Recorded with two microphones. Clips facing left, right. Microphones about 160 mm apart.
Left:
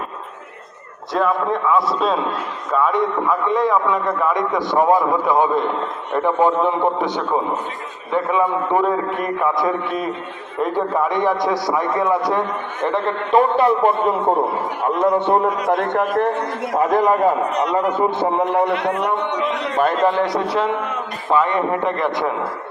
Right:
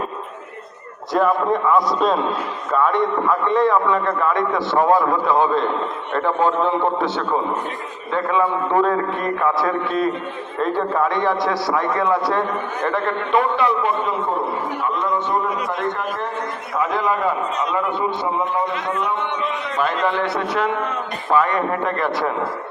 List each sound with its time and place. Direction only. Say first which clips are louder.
1.1 s a man's voice: right 1 dB; centre (ahead or behind); by 13.1 s 25° left (ahead or behind)
13.3 s a man's voice: left 4 dB; 40° left (ahead or behind)
14.8 s a man's voice: left 8 dB; 60° left (ahead or behind)
16.7 s a man's voice: left 5 dB; 40° left (ahead or behind)
17.5 s a man's voice: left 3 dB; 70° left (ahead or behind)
17.9 s a man's voice: left 4 dB; 45° left (ahead or behind)
18.3 s a man's voice: left 4 dB; 70° left (ahead or behind)
19.8 s a man's voice: left 4 dB; 45° left (ahead or behind)
21.2 s a man's voice: left 1 dB; 20° left (ahead or behind)